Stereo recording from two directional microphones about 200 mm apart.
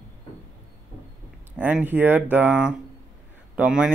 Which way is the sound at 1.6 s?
10° right (ahead or behind).